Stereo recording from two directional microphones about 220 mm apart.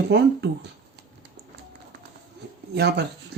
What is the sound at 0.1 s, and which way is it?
Speech, 50° right (ahead or behind).